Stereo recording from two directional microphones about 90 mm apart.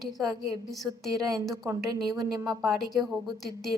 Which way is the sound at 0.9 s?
40° right (ahead or behind).